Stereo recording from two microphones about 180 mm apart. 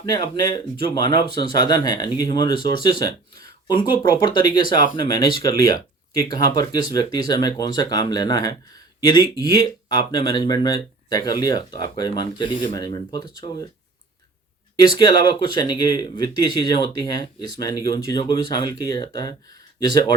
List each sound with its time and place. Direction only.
0.0 s speech: 20° left (ahead or behind)
14.8 s speech: 25° left (ahead or behind)